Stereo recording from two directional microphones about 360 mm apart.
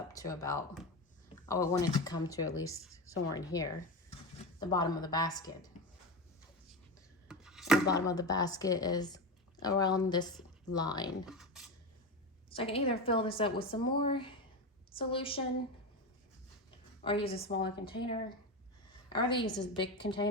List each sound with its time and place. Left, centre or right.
0.1 s speech: centre
2.9 s a woman's voice: left
3.3 s speech: centre
7.3 s chopping: centre
7.9 s speech: centre
11.3 s speech: centre
12.5 s speech: centre
17.0 s a woman's voice: centre